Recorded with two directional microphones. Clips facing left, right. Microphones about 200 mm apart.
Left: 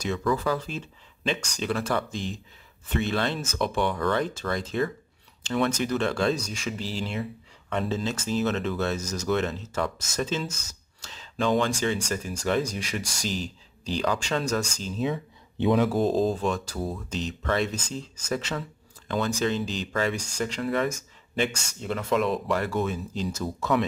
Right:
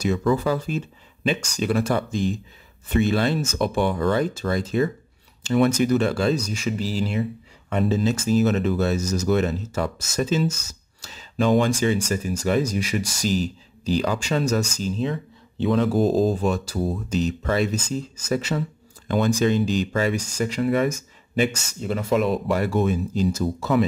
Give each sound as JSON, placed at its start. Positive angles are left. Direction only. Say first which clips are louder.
{"t": 0.2, "sound": "speech", "louder": "right 4 dB", "side_deg": -25}
{"t": 15.5, "sound": "speech", "louder": "right 1 dB", "side_deg": 20}
{"t": 15.8, "sound": "speech", "louder": "right 3 dB", "side_deg": 0}